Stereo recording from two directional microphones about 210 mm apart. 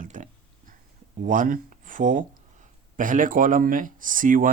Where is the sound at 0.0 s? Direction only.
40° right (ahead or behind).